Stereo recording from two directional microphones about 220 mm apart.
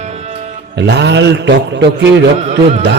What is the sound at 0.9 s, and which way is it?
A man's voice, 50° right (ahead or behind).